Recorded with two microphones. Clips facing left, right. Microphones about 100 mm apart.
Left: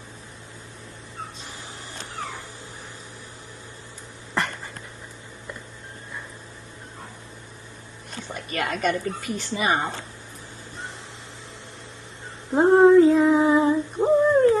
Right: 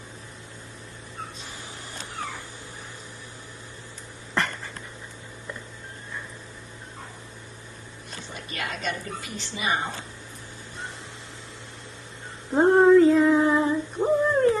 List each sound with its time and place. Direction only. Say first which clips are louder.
8.5 s a woman's voice: left 7 dB; 45° left (ahead or behind)
12.5 s female singing: left 2 dB; 5° left (ahead or behind)